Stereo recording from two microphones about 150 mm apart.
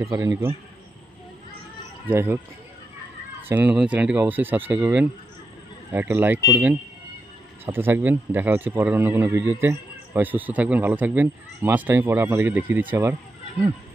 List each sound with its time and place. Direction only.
0.0 s a man's voice: 20° right (ahead or behind)
2.0 s a man's voice: 15° right (ahead or behind)
3.4 s a man's voice: 10° right (ahead or behind)